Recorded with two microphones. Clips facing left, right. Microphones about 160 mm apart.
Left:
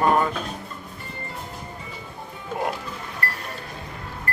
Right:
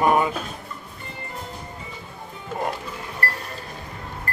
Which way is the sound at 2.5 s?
Centre (ahead or behind).